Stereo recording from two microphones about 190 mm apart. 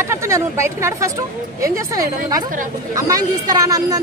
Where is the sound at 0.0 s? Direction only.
15° right (ahead or behind).